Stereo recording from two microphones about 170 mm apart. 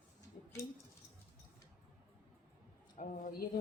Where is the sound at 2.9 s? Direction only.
55° left (ahead or behind).